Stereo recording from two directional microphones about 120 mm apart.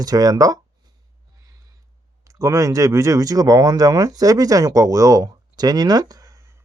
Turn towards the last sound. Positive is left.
turn(degrees=-30)  # may be behind; listen again after turning